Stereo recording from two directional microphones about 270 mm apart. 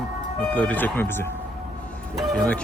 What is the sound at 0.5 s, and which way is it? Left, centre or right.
Speech, centre.